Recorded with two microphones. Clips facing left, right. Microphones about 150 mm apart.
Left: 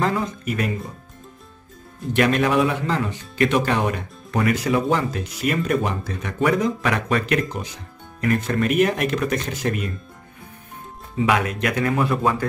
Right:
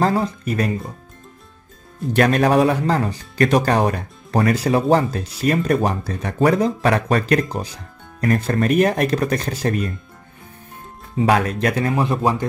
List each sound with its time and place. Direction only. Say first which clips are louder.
0.0 s speech: right 4 dB; 35° right (ahead or behind)
2.1 s speech: right 3 dB; 40° right (ahead or behind)
11.1 s speech: right 3 dB; 35° right (ahead or behind)